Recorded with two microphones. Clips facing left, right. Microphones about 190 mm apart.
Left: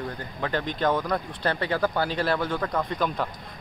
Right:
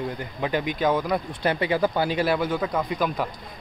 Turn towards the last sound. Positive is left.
turn(degrees=-5)  # may be behind; listen again after turning